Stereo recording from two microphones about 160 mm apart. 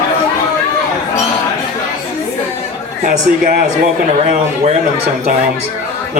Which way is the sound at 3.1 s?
55° right (ahead or behind).